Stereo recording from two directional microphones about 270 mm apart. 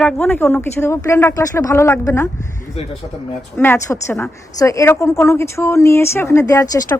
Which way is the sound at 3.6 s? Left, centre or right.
Centre.